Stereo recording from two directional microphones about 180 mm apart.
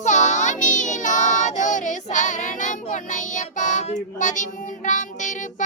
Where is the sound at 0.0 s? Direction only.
40° left (ahead or behind).